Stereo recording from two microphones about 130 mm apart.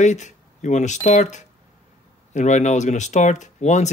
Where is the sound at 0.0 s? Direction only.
65° left (ahead or behind).